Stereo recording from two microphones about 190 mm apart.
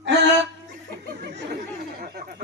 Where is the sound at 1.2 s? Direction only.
60° right (ahead or behind).